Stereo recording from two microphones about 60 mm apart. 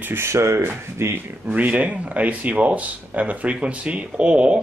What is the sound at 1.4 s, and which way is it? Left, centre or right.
Speech, right.